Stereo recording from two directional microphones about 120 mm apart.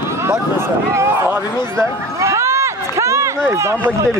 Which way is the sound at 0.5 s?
20° right (ahead or behind).